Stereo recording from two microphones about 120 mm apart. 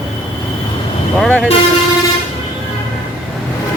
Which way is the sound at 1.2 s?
5° left (ahead or behind).